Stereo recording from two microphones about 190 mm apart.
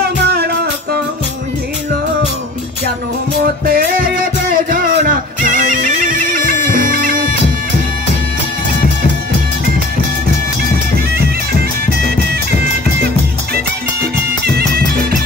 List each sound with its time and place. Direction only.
0.0 s music: 55° right (ahead or behind)
3.6 s music: 50° right (ahead or behind)
14.6 s music: 50° right (ahead or behind)